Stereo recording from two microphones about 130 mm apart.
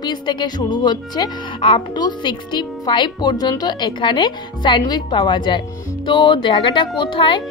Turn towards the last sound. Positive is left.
turn(degrees=40)  # may be behind; listen again after turning